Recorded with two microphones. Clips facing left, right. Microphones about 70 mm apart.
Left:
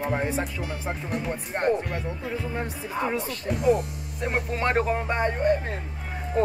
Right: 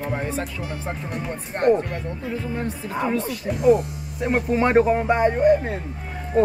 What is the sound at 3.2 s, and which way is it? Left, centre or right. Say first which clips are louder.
Speech: right 6 dB; centre.